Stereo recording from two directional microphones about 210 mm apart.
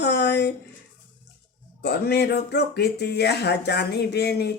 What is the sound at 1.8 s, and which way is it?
Speech, 50° left (ahead or behind).